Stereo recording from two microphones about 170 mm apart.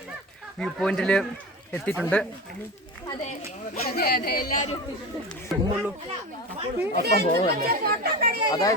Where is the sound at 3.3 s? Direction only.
55° left (ahead or behind).